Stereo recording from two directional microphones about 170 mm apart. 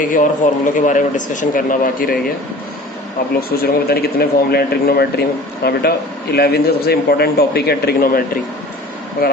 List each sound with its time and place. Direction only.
0.0 s speech: 50° left (ahead or behind)
3.6 s a man's voice: 65° left (ahead or behind)
9.2 s speech: 60° left (ahead or behind)